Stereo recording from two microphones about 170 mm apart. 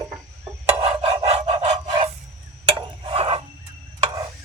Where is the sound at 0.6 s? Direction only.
35° right (ahead or behind).